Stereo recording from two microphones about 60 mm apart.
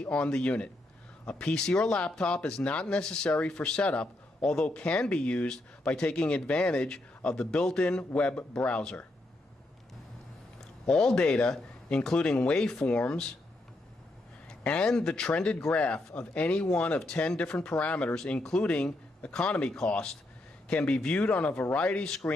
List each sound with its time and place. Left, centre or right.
0.0 s speech: centre
10.9 s speech: centre
11.1 s speech: centre
14.5 s speech: centre